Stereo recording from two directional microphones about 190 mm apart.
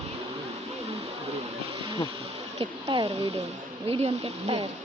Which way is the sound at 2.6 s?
25° right (ahead or behind).